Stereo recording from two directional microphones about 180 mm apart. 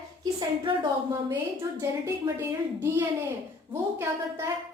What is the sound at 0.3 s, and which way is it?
Speech, 25° right (ahead or behind).